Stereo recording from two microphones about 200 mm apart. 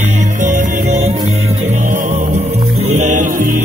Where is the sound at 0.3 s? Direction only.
40° right (ahead or behind).